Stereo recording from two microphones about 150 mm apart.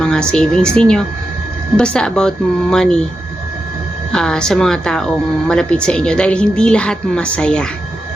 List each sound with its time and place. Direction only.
0.0 s a woman's voice: 5° left (ahead or behind)
4.1 s a woman's voice: 5° left (ahead or behind)